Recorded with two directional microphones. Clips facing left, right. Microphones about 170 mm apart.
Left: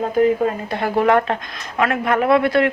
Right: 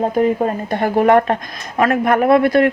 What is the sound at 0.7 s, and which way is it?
Speech, 45° right (ahead or behind).